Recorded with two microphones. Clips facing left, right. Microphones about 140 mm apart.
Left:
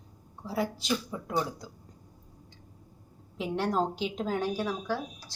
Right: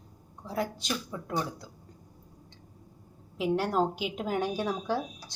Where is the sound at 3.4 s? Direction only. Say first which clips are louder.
Right 2 dB; 5° right (ahead or behind).